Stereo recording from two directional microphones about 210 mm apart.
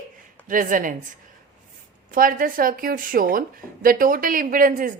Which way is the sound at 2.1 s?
40° right (ahead or behind).